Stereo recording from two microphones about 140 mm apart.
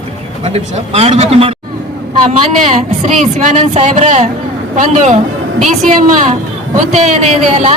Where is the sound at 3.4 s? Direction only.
60° right (ahead or behind).